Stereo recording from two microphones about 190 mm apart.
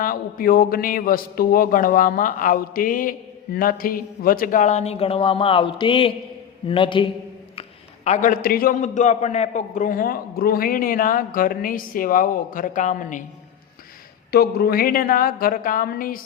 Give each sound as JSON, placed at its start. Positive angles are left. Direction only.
{"t": 0.0, "sound": "a man's voice", "side_deg": 50}
{"t": 8.0, "sound": "a man's voice", "side_deg": 40}
{"t": 14.3, "sound": "a man's voice", "side_deg": 55}